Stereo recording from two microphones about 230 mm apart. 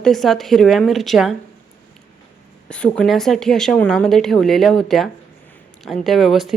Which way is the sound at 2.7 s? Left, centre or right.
Centre.